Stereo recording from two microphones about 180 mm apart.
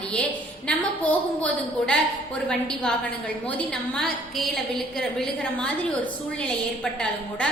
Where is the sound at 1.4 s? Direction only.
5° left (ahead or behind).